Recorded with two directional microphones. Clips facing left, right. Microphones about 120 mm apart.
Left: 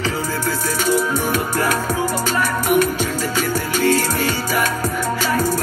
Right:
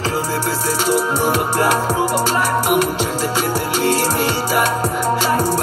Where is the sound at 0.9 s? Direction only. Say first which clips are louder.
Right 3 dB; 20° right (ahead or behind).